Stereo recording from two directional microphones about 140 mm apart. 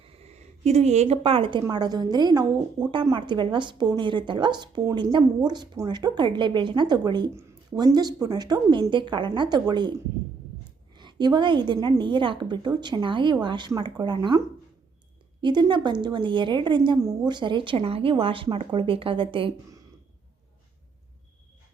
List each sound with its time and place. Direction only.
0.0 s a woman's voice: 45° right (ahead or behind)
10.9 s a woman's voice: 30° right (ahead or behind)
17.0 s a woman's voice: 20° right (ahead or behind)
17.3 s a woman's voice: 35° right (ahead or behind)